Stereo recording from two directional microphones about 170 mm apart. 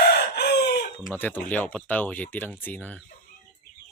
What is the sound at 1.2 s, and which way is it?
Speech, 10° left (ahead or behind).